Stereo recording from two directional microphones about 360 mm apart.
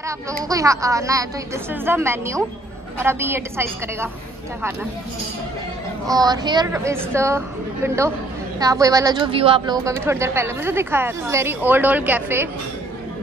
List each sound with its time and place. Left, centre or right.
0.0 s speech: centre
6.0 s speech: centre